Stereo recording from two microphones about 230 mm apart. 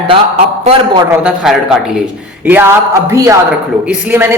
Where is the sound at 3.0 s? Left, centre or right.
Centre.